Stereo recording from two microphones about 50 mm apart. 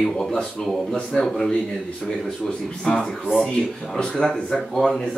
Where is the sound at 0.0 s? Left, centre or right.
Centre.